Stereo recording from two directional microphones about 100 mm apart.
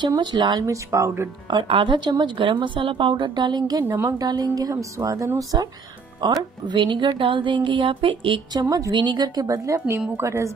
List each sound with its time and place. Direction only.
0.2 s a woman's voice: 50° right (ahead or behind)
0.7 s speech: 30° right (ahead or behind)
1.5 s a woman's voice: 60° right (ahead or behind)
3.8 s speech: 20° right (ahead or behind)
4.2 s speech: 45° right (ahead or behind)
6.2 s a woman's voice: 50° right (ahead or behind)
8.5 s a woman's voice: 40° right (ahead or behind)
10.1 s speech: 30° right (ahead or behind)